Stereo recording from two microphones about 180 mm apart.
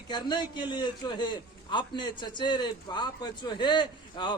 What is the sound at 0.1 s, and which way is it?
A man's voice, 25° left (ahead or behind).